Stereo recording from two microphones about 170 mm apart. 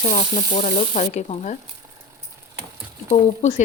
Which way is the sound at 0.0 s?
40° left (ahead or behind).